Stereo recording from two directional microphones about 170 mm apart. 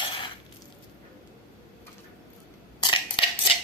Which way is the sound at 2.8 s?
30° left (ahead or behind).